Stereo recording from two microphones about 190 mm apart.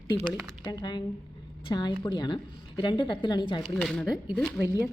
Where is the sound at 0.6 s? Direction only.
20° left (ahead or behind).